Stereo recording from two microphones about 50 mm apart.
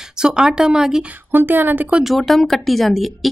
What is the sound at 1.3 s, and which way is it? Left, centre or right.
Speech, right.